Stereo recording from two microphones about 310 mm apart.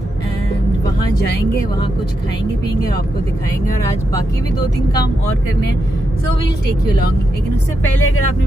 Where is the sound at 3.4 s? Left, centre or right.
Centre.